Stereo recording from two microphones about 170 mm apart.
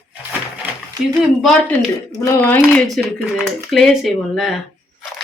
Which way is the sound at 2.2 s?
15° left (ahead or behind).